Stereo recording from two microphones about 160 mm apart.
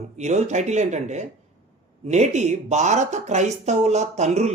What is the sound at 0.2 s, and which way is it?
Speech, 45° right (ahead or behind).